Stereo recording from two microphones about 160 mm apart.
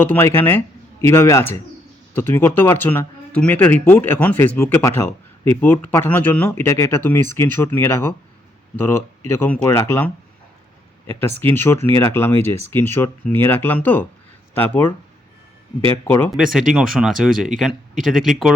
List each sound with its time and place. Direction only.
0.0 s speech: 15° left (ahead or behind)
16.0 s speech: 15° left (ahead or behind)
16.3 s speech: centre (ahead or behind)